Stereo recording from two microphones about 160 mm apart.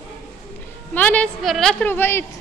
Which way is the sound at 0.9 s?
10° left (ahead or behind).